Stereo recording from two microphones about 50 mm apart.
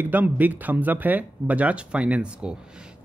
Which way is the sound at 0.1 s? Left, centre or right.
Right.